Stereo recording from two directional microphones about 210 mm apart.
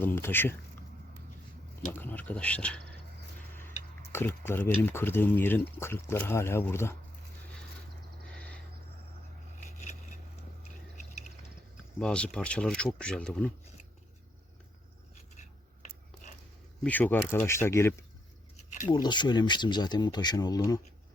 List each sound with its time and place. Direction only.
0.0 s speech: 10° left (ahead or behind)
1.9 s speech: 10° left (ahead or behind)
3.5 s a sound: 10° left (ahead or behind)
4.1 s speech: 10° left (ahead or behind)
8.4 s a sound: 5° left (ahead or behind)
11.9 s speech: 5° left (ahead or behind)
16.8 s speech: 10° left (ahead or behind)
18.5 s a sound: 35° left (ahead or behind)
18.9 s speech: 20° left (ahead or behind)